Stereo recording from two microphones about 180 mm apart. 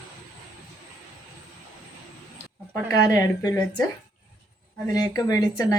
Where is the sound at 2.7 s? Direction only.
20° left (ahead or behind).